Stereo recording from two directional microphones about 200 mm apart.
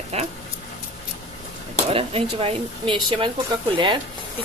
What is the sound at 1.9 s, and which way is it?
Speech, 30° right (ahead or behind).